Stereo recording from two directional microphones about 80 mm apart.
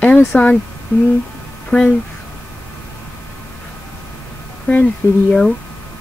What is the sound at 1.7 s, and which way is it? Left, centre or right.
Speech, centre.